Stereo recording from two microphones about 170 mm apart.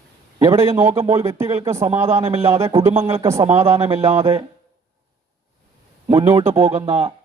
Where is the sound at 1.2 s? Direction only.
15° right (ahead or behind).